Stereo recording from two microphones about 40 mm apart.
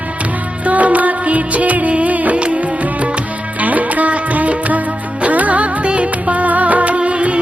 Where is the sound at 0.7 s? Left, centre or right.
Right.